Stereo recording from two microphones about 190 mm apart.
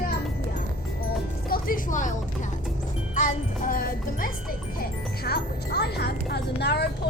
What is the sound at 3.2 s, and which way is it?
Music, 45° left (ahead or behind).